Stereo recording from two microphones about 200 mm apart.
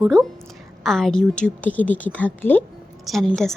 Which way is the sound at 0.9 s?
Centre (ahead or behind).